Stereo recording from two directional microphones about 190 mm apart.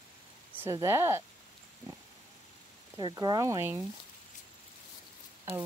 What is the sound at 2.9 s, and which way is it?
Speech, 20° right (ahead or behind).